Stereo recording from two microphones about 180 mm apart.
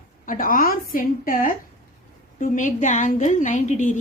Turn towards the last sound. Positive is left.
turn(degrees=45)  # may be behind; listen again after turning